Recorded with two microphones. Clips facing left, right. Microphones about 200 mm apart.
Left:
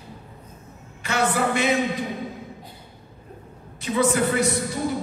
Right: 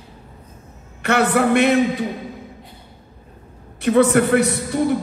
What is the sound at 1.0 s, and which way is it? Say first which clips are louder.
Speech: right 6 dB; 65° right (ahead or behind).